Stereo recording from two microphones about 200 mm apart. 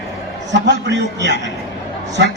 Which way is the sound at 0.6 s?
60° right (ahead or behind).